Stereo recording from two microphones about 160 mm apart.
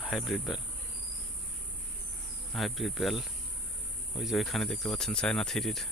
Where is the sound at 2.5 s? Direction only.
Centre (ahead or behind).